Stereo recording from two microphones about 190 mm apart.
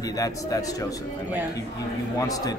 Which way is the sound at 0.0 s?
20° left (ahead or behind).